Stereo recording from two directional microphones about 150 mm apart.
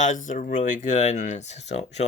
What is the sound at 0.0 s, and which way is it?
Speech, 55° left (ahead or behind).